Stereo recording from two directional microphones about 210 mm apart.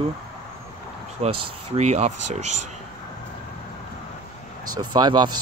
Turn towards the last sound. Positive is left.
turn(degrees=-20)  # may be behind; listen again after turning